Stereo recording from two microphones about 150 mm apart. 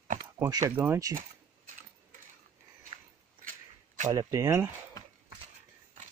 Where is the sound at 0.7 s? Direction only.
15° right (ahead or behind).